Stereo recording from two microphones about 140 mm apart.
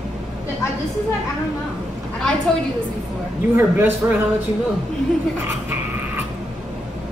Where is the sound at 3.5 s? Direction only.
15° right (ahead or behind).